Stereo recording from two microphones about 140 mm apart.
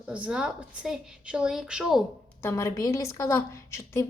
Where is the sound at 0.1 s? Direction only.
5° right (ahead or behind).